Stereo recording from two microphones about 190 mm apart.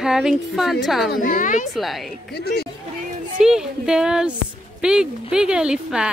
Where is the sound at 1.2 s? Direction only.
45° left (ahead or behind).